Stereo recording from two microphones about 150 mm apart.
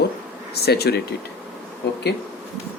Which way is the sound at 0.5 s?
90° left.